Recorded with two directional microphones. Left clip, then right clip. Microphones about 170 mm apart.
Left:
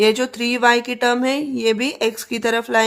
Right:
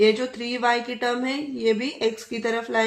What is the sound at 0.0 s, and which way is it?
Speech, 55° left (ahead or behind).